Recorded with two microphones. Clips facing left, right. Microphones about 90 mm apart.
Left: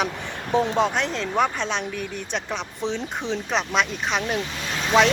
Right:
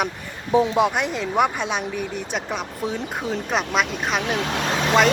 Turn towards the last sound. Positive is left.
turn(degrees=-70)  # may be behind; listen again after turning